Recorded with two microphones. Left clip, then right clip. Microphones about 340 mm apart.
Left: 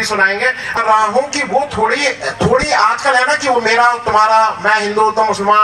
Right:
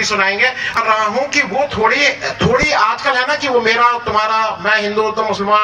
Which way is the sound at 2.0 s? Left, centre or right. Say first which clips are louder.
Right 1 dB; left.